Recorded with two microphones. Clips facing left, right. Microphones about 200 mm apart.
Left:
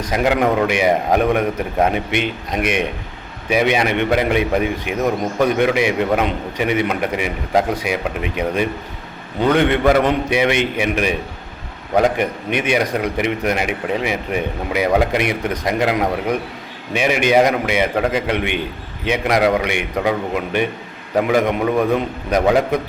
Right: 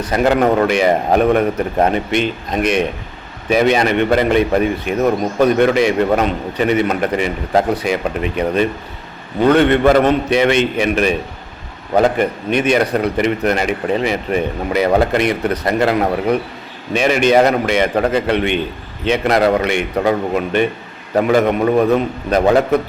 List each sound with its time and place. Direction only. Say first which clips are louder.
0.6 s a man's voice: right 2 dB; 10° left (ahead or behind)